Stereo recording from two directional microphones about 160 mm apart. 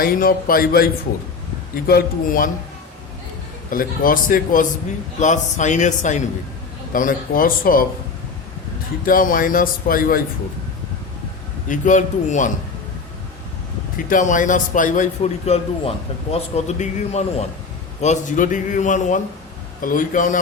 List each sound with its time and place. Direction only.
0.0 s speech: 65° left (ahead or behind)
3.7 s a man's voice: 60° left (ahead or behind)
9.0 s speech: 60° left (ahead or behind)
11.7 s a man's voice: 50° left (ahead or behind)
14.1 s a man's voice: 55° left (ahead or behind)